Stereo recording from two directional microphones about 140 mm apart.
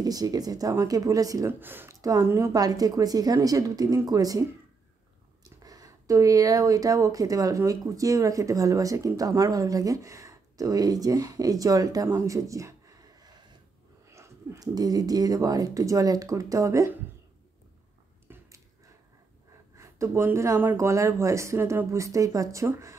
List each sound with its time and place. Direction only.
0.0 s speech: 25° right (ahead or behind)
1.6 s speech: 15° right (ahead or behind)
5.6 s speech: 25° right (ahead or behind)
18.3 s a sound: 15° right (ahead or behind)
19.8 s speech: 20° right (ahead or behind)